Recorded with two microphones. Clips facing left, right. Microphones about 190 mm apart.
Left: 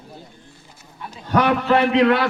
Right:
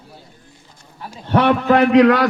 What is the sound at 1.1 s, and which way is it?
Speech, 30° right (ahead or behind).